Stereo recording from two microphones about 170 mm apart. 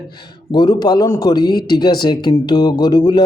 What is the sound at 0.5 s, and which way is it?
Speech, 25° left (ahead or behind).